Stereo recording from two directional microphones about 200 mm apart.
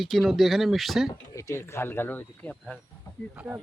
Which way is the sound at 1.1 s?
15° left (ahead or behind).